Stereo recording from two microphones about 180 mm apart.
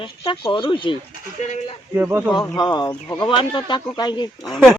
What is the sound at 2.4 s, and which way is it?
Speech, 20° left (ahead or behind).